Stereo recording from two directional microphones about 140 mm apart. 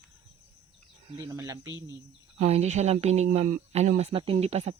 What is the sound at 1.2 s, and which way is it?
Speech, 25° right (ahead or behind).